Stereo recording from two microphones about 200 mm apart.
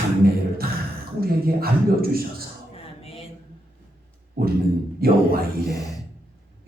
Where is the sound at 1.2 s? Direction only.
50° right (ahead or behind).